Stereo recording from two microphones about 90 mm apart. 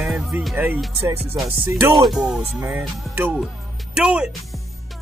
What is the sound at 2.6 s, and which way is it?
Speech, 25° right (ahead or behind).